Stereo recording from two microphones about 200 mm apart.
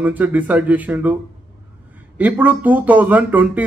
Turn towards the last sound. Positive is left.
turn(degrees=-10)  # may be behind; listen again after turning